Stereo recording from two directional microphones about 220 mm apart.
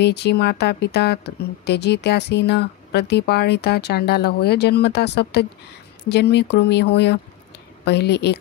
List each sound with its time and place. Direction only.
0.0 s a woman's voice: 50° left (ahead or behind)